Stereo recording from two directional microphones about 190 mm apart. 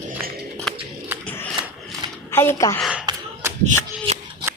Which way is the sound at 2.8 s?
5° right (ahead or behind).